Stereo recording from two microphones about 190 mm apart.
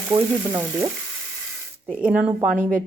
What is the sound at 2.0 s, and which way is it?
Speech, 5° right (ahead or behind).